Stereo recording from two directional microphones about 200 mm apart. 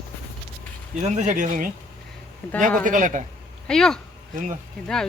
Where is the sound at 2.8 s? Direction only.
40° right (ahead or behind).